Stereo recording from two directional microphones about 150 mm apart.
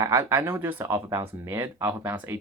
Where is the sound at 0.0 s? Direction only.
20° right (ahead or behind).